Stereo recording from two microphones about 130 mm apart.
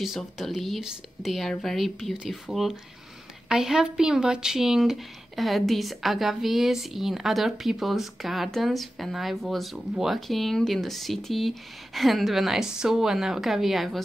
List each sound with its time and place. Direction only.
0.0 s speech: centre (ahead or behind)